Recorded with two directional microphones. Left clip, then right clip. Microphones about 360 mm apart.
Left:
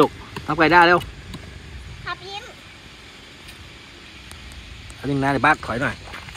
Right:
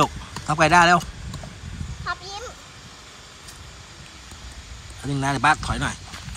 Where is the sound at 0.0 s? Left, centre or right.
Centre.